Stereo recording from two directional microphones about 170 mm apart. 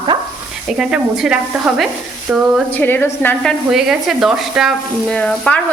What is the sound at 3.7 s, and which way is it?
Speech, centre (ahead or behind).